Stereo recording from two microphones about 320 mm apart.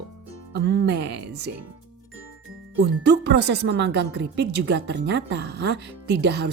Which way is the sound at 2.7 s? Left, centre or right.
Right.